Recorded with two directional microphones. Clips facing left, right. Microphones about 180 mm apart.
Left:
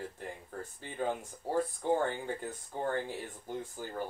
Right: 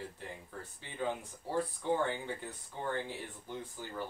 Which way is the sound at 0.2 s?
45° left (ahead or behind).